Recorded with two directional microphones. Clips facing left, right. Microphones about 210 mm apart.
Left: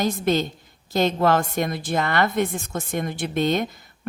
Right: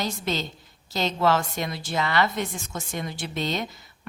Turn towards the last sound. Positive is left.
turn(degrees=50)  # may be behind; listen again after turning